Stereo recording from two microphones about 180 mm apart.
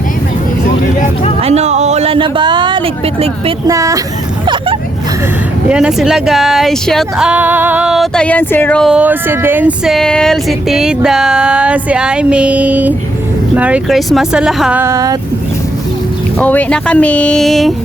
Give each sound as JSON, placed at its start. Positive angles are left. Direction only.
{"t": 1.4, "sound": "speech", "side_deg": -35}
{"t": 3.7, "sound": "speech", "side_deg": -20}
{"t": 4.4, "sound": "vehicle", "side_deg": -25}
{"t": 5.6, "sound": "speech", "side_deg": -5}
{"t": 8.9, "sound": "speech", "side_deg": -10}
{"t": 16.4, "sound": "speech", "side_deg": 10}